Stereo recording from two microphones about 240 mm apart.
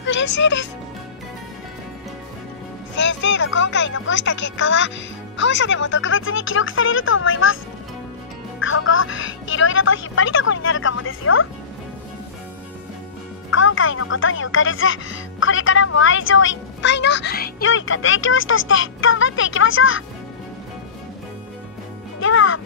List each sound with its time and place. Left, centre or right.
0.0 s speech: left
3.0 s speech: left
8.5 s speech: left
13.5 s speech: left
17.6 s speech: left
22.2 s music: left